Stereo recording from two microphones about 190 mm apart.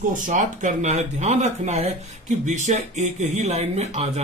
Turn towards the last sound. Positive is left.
turn(degrees=-35)  # may be behind; listen again after turning